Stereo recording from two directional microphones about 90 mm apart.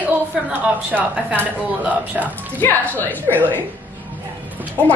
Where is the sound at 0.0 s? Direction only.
20° right (ahead or behind).